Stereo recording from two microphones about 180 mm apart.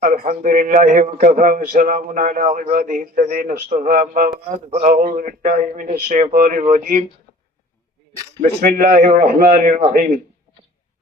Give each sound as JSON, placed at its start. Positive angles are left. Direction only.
{"t": 0.0, "sound": "a man's voice", "side_deg": -50}
{"t": 8.4, "sound": "a man's voice", "side_deg": -50}